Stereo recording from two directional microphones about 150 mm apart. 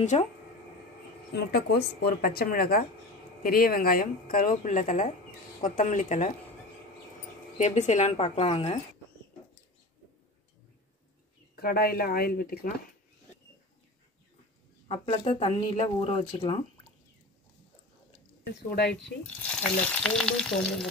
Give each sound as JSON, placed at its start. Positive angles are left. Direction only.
{"t": 0.1, "sound": "speech", "side_deg": 45}
{"t": 1.3, "sound": "a woman's voice", "side_deg": 90}
{"t": 7.5, "sound": "speech", "side_deg": 50}
{"t": 11.5, "sound": "a woman's voice", "side_deg": 90}
{"t": 14.9, "sound": "speech", "side_deg": 40}
{"t": 18.7, "sound": "a woman's voice", "side_deg": 90}
{"t": 19.4, "sound": "frying", "side_deg": 10}